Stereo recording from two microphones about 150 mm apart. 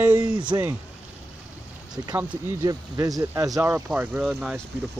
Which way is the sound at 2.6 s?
25° right (ahead or behind).